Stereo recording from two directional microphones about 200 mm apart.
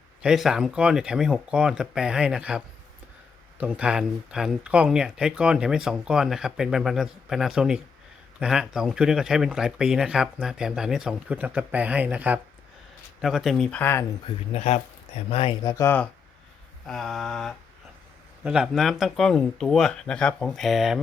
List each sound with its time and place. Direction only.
0.2 s speech: 5° right (ahead or behind)
14.3 s speech: 30° left (ahead or behind); by 16.0 s 10° left (ahead or behind)
16.8 s speech: centre (ahead or behind)